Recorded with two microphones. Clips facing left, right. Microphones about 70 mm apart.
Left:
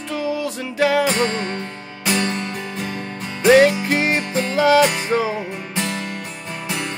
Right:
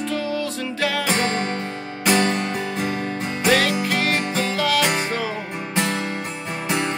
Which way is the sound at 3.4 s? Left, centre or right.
Left.